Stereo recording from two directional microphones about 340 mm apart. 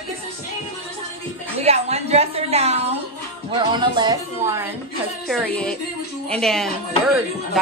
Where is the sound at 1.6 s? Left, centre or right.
Centre.